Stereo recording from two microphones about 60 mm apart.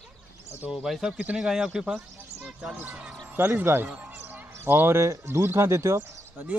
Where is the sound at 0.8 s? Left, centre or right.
Centre.